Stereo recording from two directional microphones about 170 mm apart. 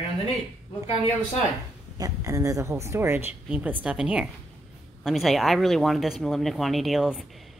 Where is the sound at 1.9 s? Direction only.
20° right (ahead or behind).